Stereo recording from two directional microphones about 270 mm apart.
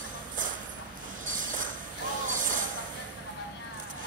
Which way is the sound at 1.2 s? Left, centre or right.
Right.